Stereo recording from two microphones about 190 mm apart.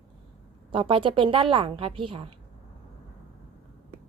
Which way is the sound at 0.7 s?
25° right (ahead or behind).